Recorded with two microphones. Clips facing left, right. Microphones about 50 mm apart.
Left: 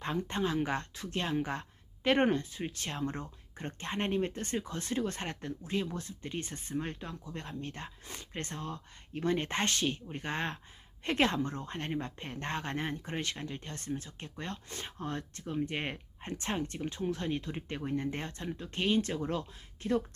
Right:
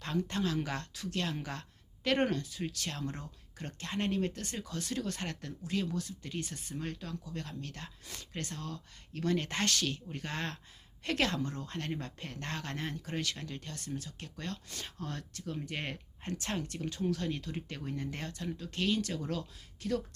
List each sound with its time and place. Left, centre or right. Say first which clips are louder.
0.0 s speech: left 1 dB; left